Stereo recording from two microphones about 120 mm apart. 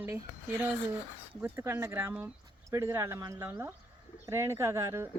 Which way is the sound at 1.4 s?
20° right (ahead or behind).